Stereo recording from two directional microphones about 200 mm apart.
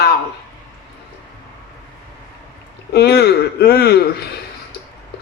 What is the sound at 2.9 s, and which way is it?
Speech, 50° left (ahead or behind).